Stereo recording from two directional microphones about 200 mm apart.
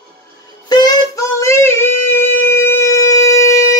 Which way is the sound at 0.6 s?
20° left (ahead or behind).